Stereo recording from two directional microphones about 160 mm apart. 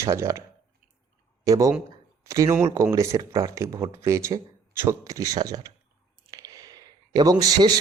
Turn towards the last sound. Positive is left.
turn(degrees=-25)  # may be behind; listen again after turning